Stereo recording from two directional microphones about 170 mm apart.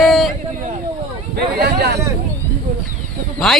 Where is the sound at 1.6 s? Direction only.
75° right (ahead or behind).